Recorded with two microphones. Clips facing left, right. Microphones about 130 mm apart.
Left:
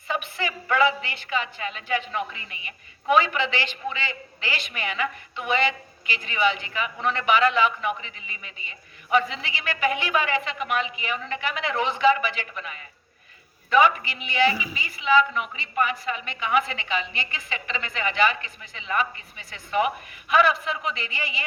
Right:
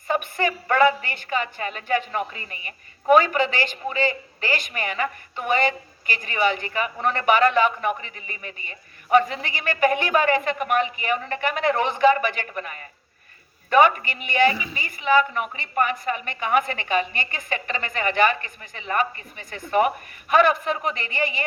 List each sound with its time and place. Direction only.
0.1 s a woman's voice: 50° right (ahead or behind)
14.5 s a woman's voice: 10° left (ahead or behind)
14.8 s a woman's voice: 50° right (ahead or behind)